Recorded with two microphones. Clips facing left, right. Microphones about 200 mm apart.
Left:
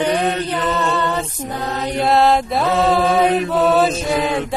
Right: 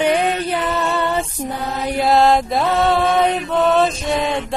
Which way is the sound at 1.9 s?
Centre (ahead or behind).